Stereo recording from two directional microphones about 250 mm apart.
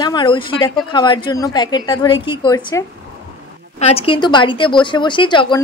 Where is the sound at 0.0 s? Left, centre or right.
Centre.